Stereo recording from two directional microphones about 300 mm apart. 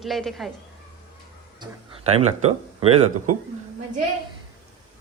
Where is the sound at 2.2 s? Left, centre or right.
Centre.